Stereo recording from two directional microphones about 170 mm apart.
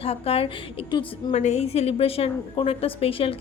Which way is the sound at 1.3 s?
40° left (ahead or behind).